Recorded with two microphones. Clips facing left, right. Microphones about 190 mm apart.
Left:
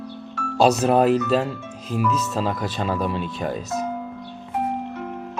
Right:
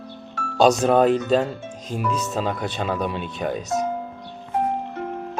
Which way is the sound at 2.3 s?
Centre (ahead or behind).